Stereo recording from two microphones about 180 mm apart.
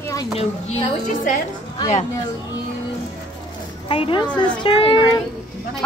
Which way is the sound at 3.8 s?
30° left (ahead or behind).